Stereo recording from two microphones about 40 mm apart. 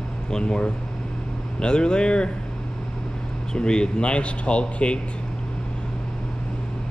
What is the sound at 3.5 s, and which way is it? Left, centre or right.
Speech, left.